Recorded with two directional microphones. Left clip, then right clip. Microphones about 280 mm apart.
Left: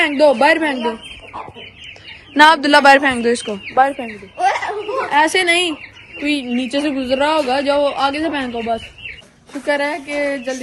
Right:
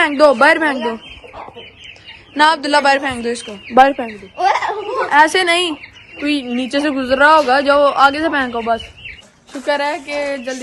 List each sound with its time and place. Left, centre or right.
0.0 s a man's voice: centre
2.3 s speech: centre
4.0 s a sound: right
5.1 s a man's voice: centre
9.6 s a man's voice: centre